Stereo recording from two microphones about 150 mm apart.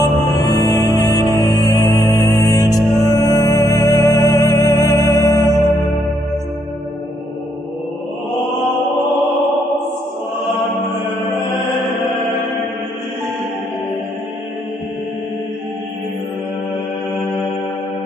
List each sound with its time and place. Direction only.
0.0 s music: 20° left (ahead or behind)